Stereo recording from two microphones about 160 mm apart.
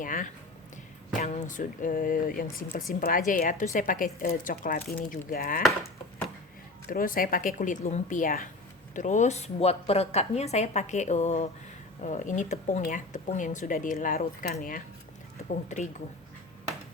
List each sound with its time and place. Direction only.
0.0 s a sound: 55° left (ahead or behind)
1.2 s speech: 50° left (ahead or behind); by 5.6 s 65° left (ahead or behind)
6.8 s speech: 60° left (ahead or behind)
15.4 s speech: 50° left (ahead or behind)